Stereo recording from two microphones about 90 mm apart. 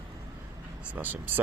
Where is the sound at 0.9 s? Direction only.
20° right (ahead or behind).